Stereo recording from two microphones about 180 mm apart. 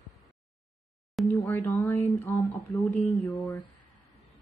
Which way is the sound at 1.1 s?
10° left (ahead or behind).